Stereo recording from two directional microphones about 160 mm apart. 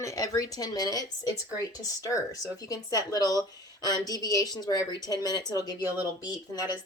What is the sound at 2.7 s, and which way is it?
A woman's voice, 25° left (ahead or behind).